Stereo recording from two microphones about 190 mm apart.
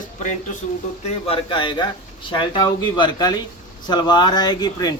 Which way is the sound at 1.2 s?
30° left (ahead or behind).